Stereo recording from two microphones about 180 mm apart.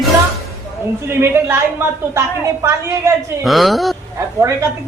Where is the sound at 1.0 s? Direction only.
15° right (ahead or behind).